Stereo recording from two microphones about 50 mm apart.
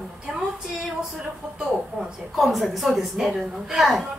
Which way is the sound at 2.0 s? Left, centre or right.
Right.